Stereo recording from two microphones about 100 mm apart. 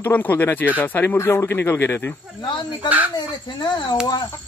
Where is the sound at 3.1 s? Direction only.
45° left (ahead or behind).